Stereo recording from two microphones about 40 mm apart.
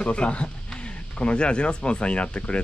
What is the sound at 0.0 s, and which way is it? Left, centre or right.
Speech, left.